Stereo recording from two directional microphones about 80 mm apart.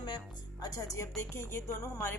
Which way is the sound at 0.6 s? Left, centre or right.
Left.